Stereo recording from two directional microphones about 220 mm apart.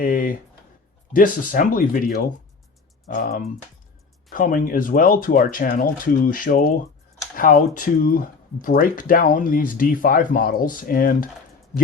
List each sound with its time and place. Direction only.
0.0 s speech: 40° left (ahead or behind)